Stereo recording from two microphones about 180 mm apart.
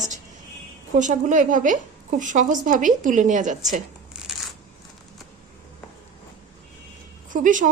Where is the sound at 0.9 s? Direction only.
45° right (ahead or behind).